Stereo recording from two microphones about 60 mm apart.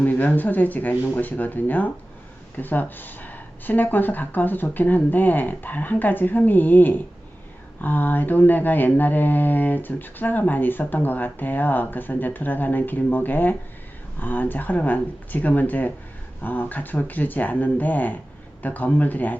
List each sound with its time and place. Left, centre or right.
0.0 s speech: left